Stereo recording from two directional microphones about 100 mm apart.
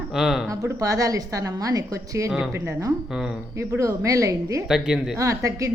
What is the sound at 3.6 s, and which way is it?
A woman's voice, 30° right (ahead or behind).